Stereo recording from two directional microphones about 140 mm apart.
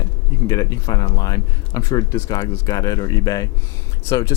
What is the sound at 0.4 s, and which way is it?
Speech, 25° left (ahead or behind).